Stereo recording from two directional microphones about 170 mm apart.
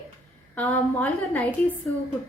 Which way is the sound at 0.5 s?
10° left (ahead or behind).